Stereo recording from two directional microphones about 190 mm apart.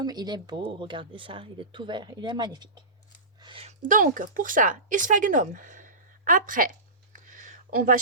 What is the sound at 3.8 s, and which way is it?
A woman's voice, 45° right (ahead or behind).